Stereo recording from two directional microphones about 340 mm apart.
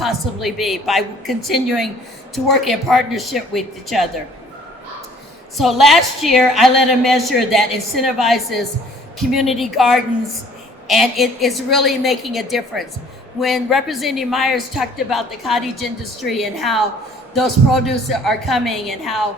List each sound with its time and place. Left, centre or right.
0.0 s a woman's voice: centre
5.5 s a woman's voice: centre